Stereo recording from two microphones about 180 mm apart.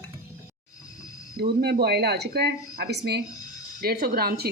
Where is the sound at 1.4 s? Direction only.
60° right (ahead or behind).